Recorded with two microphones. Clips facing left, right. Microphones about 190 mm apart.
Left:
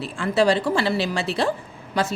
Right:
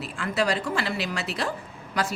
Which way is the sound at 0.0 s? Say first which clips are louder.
Left 7 dB; 30° left (ahead or behind).